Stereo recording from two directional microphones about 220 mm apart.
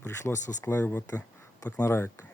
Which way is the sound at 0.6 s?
10° left (ahead or behind).